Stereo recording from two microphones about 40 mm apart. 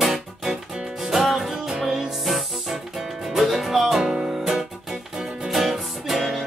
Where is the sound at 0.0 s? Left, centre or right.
Centre.